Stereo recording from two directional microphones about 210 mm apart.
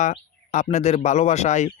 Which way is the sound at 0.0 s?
35° left (ahead or behind).